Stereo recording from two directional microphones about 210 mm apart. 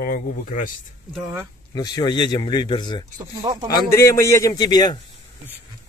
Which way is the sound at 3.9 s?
15° left (ahead or behind).